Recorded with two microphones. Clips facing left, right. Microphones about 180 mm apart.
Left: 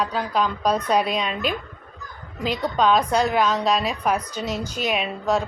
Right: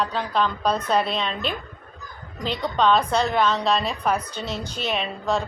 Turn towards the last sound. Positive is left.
turn(degrees=10)  # may be behind; listen again after turning